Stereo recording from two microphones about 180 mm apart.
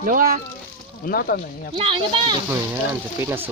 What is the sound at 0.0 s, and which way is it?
Speech, 50° right (ahead or behind).